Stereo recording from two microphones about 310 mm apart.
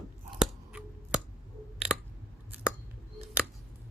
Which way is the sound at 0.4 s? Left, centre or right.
Centre.